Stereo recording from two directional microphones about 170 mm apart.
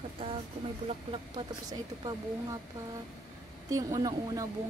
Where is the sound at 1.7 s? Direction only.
20° right (ahead or behind).